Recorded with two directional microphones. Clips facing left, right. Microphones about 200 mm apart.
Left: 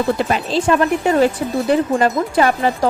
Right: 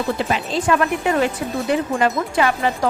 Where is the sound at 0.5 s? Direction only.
30° left (ahead or behind).